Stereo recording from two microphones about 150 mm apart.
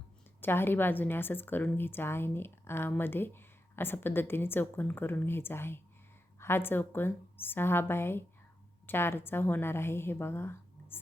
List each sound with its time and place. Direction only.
0.4 s a woman's voice: 15° left (ahead or behind)